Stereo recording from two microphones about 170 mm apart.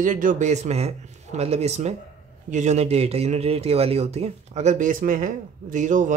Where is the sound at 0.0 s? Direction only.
50° right (ahead or behind).